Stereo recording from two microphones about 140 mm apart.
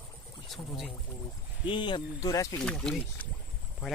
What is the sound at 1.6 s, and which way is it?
Speech, 35° left (ahead or behind).